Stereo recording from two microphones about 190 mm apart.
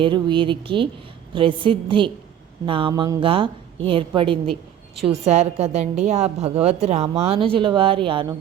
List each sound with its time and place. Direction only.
0.0 s a woman's voice: 25° right (ahead or behind)